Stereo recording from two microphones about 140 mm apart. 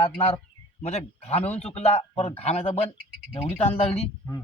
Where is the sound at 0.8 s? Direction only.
50° left (ahead or behind).